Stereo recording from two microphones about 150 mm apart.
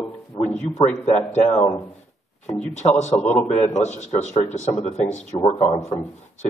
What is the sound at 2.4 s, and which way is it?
Speech, 50° left (ahead or behind).